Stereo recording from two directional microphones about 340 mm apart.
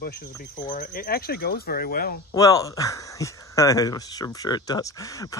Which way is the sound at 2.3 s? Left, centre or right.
Centre.